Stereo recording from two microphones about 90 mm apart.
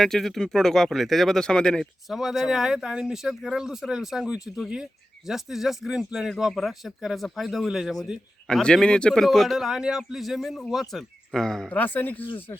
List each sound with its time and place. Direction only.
0.0 s speech: 5° left (ahead or behind)
11.7 s speech: 20° left (ahead or behind)